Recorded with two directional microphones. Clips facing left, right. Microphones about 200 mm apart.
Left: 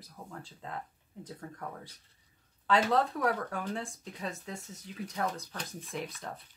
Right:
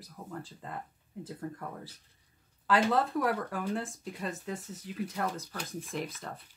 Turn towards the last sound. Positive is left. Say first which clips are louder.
# right 2 dB
turn(degrees=0)  # may be behind; listen again after turning